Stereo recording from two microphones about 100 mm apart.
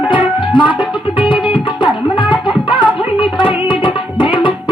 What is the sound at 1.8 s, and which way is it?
Music, 55° left (ahead or behind).